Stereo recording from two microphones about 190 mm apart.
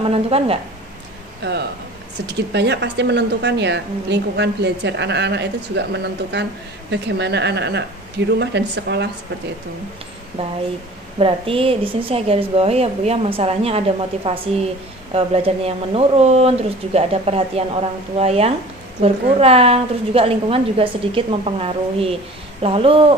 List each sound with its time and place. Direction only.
0.1 s a woman's voice: 30° right (ahead or behind)
1.4 s speech: 65° right (ahead or behind)
6.9 s speech: 65° right (ahead or behind)
10.4 s a woman's voice: 30° right (ahead or behind)